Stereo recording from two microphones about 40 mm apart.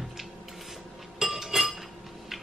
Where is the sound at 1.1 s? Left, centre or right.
Centre.